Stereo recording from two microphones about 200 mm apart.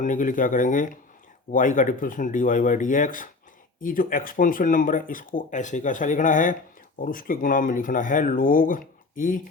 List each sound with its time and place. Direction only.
0.0 s speech: 40° left (ahead or behind)